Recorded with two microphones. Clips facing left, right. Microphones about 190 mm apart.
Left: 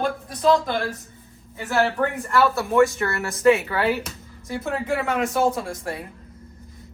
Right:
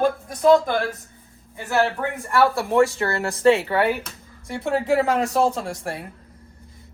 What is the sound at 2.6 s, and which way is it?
Speech, 30° right (ahead or behind).